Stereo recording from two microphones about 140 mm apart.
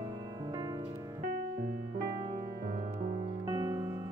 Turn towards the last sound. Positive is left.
turn(degrees=-20)  # may be behind; listen again after turning